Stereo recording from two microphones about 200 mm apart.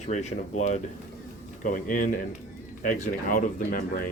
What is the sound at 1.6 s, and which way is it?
Speech, 40° left (ahead or behind).